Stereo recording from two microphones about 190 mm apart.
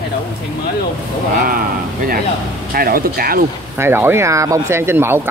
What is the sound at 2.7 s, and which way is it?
Speech, 50° right (ahead or behind).